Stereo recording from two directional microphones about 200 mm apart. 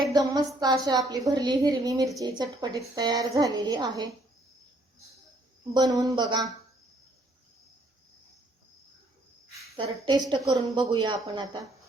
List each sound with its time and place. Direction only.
0.1 s a woman's voice: 20° right (ahead or behind)
5.7 s a woman's voice: 20° right (ahead or behind)
9.7 s a woman's voice: 25° right (ahead or behind)